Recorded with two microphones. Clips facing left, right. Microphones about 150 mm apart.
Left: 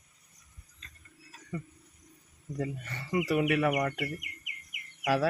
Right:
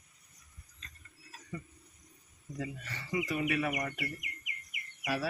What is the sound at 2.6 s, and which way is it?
Speech, 50° left (ahead or behind).